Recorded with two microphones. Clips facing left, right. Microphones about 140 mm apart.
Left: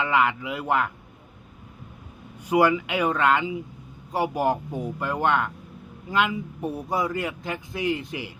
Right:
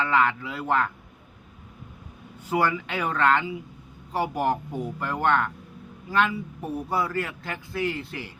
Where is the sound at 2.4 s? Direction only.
15° left (ahead or behind).